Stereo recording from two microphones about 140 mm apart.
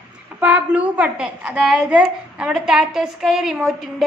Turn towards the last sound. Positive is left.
turn(degrees=0)  # may be behind; listen again after turning